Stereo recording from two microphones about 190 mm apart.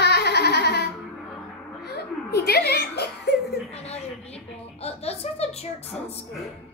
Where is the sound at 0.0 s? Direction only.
60° left (ahead or behind).